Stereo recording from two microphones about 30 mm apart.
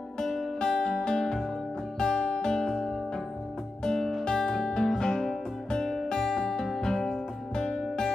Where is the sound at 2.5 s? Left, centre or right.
Centre.